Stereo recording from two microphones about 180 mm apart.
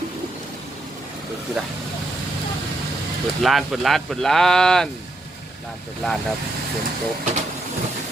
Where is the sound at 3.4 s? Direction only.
Centre (ahead or behind).